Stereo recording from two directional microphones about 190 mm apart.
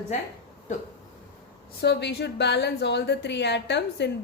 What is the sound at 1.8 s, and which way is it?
A woman's voice, 60° left (ahead or behind).